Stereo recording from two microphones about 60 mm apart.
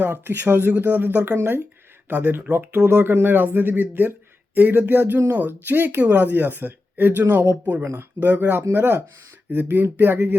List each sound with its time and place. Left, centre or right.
0.0 s speech: right
7.8 s speech: right
8.2 s speech: right